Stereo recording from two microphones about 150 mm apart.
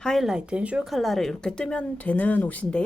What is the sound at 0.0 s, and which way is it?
Speech, centre (ahead or behind).